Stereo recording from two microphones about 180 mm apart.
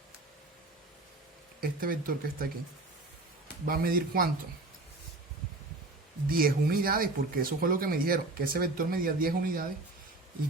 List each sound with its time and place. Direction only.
1.6 s speech: 50° right (ahead or behind)
3.7 s speech: 55° right (ahead or behind)
6.2 s speech: 55° right (ahead or behind)